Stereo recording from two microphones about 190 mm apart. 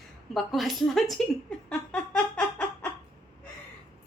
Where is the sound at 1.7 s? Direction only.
5° left (ahead or behind).